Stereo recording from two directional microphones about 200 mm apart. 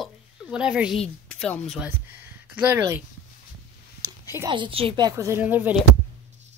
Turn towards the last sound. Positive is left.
turn(degrees=-10)  # may be behind; listen again after turning